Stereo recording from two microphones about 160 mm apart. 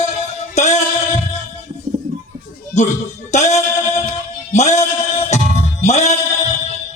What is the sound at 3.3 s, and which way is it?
Music, 45° left (ahead or behind).